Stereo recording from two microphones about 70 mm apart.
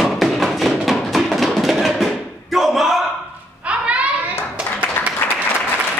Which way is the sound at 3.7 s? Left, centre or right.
Centre.